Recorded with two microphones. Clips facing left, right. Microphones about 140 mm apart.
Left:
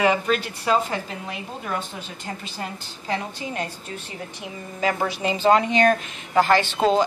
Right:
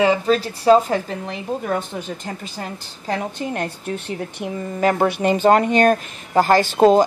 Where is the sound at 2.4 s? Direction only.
45° right (ahead or behind).